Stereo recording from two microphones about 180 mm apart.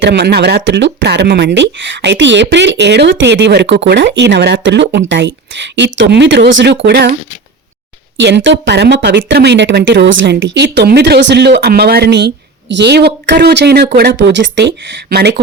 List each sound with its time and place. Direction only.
0.0 s speech: 70° right (ahead or behind)
8.2 s speech: 85° right
15.1 s speech: 65° right (ahead or behind)